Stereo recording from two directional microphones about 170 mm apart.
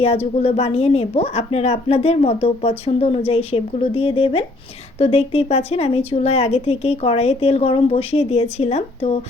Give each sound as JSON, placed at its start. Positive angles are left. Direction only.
{"t": 0.0, "sound": "a woman's voice", "side_deg": 35}